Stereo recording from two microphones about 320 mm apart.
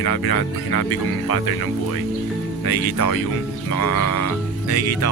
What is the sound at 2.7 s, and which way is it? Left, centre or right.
Speech, left.